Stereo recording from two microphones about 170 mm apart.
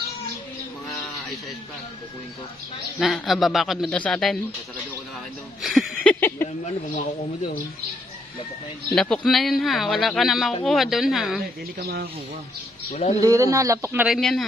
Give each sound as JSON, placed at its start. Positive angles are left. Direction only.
{"t": 3.0, "sound": "speech", "side_deg": 0}
{"t": 5.6, "sound": "a sound", "side_deg": 0}
{"t": 6.2, "sound": "speech", "side_deg": 15}
{"t": 8.9, "sound": "speech", "side_deg": 5}
{"t": 11.8, "sound": "speech", "side_deg": -70}
{"t": 12.9, "sound": "speech", "side_deg": 40}
{"t": 13.2, "sound": "speech", "side_deg": -20}
{"t": 14.0, "sound": "speech", "side_deg": 0}